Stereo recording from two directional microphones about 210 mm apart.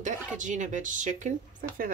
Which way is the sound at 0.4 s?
35° right (ahead or behind).